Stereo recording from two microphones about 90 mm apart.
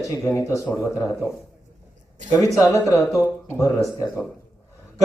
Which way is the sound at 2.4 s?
35° left (ahead or behind).